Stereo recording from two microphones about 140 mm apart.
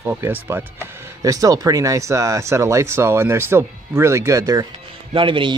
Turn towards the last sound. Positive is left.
turn(degrees=-35)  # may be behind; listen again after turning